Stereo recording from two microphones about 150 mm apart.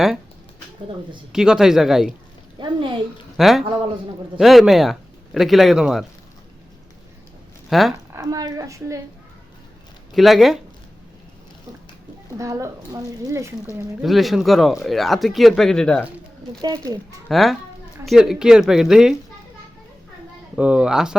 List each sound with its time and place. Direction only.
1.3 s speech: 5° right (ahead or behind)
2.6 s a woman's voice: 30° right (ahead or behind)
3.3 s speech: centre (ahead or behind)
7.7 s speech: centre (ahead or behind)
7.9 s a woman's voice: 20° right (ahead or behind)
10.2 s speech: centre (ahead or behind)
12.4 s a woman's voice: 20° right (ahead or behind)
14.0 s speech: centre (ahead or behind)
16.6 s a woman's voice: 25° right (ahead or behind)
17.2 s speech: centre (ahead or behind)
20.6 s speech: 10° right (ahead or behind)